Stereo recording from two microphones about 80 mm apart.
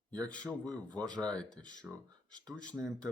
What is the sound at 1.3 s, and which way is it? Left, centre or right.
Speech, centre.